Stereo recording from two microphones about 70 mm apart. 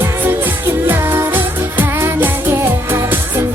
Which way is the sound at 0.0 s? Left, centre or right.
Right.